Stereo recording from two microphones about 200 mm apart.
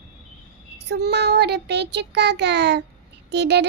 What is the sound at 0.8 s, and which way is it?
Child singing, 55° right (ahead or behind).